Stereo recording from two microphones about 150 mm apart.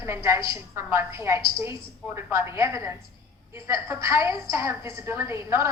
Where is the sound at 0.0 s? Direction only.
20° right (ahead or behind).